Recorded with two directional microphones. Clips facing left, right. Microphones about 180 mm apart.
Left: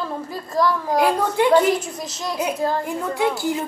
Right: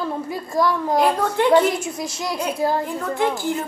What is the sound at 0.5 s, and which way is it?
Speech, 25° right (ahead or behind).